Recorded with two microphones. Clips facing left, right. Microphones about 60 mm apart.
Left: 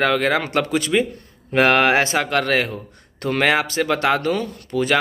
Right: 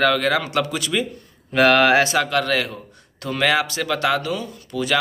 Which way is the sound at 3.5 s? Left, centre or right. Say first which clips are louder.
Even; left.